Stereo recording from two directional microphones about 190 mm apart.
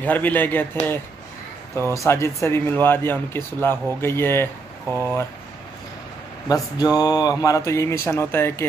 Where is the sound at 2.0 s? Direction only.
15° left (ahead or behind).